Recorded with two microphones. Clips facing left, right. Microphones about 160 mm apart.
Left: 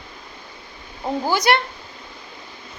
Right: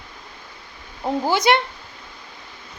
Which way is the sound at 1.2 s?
25° right (ahead or behind).